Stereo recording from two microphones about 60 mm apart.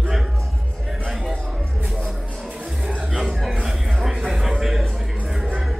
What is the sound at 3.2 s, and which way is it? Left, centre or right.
Chuckle, centre.